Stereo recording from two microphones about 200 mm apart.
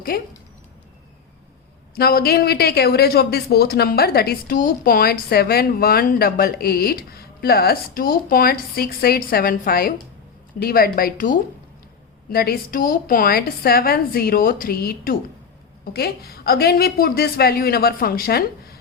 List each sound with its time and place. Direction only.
0.1 s speech: 50° left (ahead or behind)
2.0 s speech: 50° left (ahead or behind)